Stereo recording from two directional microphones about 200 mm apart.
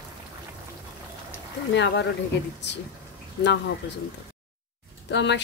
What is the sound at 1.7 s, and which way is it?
Speech, 60° left (ahead or behind).